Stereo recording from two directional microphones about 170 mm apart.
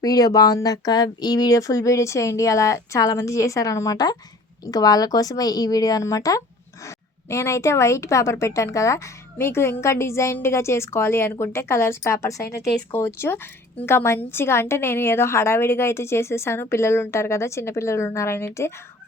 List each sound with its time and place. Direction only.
0.0 s a woman's voice: 20° left (ahead or behind)